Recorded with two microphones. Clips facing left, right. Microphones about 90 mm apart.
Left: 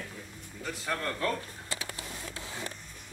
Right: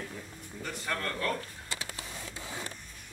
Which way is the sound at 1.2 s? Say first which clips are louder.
Left 2 dB; 25° left (ahead or behind).